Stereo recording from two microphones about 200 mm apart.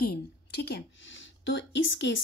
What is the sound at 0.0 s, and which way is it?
A woman's voice, 55° left (ahead or behind).